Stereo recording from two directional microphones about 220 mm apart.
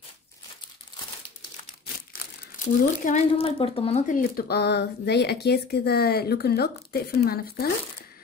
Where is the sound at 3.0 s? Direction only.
30° left (ahead or behind); by 7.7 s 45° left (ahead or behind).